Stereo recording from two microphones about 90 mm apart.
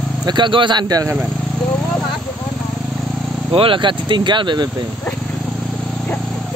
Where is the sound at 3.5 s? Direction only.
80° right; by 4.7 s 55° right (ahead or behind).